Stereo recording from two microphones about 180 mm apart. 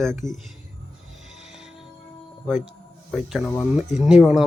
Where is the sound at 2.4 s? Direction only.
Centre (ahead or behind).